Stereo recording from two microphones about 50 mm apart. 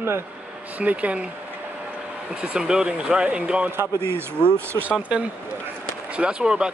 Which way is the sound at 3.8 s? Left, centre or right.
Right.